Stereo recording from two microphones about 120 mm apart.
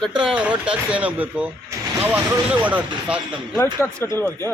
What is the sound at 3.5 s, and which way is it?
Speech, 20° left (ahead or behind).